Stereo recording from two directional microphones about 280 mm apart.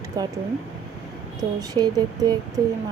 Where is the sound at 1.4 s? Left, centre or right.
Centre.